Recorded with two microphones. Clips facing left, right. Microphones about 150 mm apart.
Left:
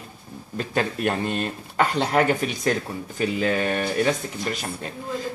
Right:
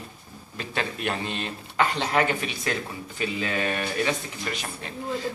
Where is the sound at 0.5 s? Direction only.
45° left (ahead or behind).